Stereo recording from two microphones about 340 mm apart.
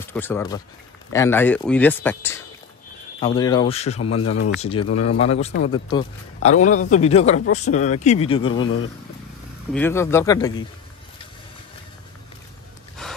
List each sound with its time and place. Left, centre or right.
0.0 s a man's voice: centre
4.2 s speech: left
4.6 s speech: centre
9.7 s speech: centre
13.0 s wood: centre